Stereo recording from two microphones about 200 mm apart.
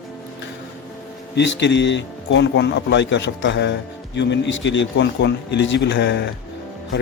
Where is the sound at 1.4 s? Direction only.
60° left (ahead or behind).